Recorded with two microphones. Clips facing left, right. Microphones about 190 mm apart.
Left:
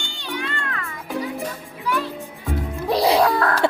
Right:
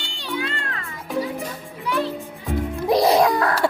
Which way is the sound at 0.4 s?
30° right (ahead or behind).